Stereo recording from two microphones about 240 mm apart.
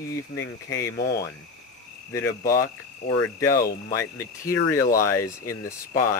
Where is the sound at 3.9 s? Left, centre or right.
Centre.